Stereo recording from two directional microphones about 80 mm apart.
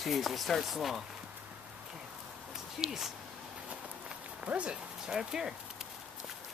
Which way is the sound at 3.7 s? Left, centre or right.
Centre.